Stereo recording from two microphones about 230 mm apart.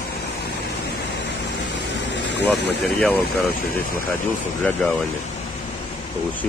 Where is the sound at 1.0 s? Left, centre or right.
Left.